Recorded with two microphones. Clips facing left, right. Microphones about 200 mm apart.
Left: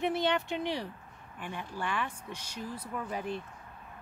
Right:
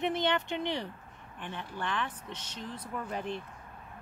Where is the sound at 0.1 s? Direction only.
5° left (ahead or behind).